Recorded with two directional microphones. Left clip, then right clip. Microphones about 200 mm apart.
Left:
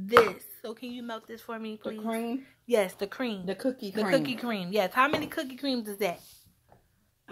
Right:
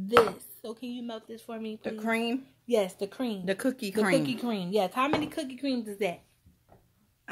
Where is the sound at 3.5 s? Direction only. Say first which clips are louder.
Right 2 dB; 50° right (ahead or behind).